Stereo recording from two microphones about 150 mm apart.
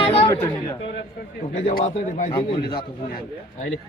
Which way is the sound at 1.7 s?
55° left (ahead or behind).